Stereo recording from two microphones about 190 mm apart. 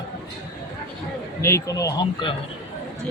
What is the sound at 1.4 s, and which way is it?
Speech, 15° left (ahead or behind).